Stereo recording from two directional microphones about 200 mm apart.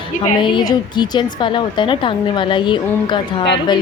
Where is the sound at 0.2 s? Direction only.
25° left (ahead or behind).